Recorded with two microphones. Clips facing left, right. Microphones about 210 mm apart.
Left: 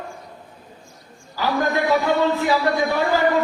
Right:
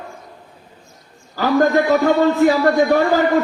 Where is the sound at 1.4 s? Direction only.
45° right (ahead or behind).